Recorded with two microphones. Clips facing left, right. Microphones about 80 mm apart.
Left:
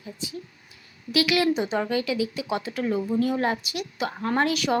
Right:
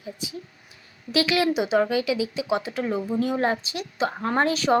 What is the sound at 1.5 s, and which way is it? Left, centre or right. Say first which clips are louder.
A woman's voice: right 3 dB; centre.